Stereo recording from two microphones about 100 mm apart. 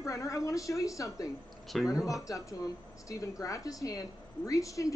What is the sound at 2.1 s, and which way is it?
A woman's voice, 35° left (ahead or behind).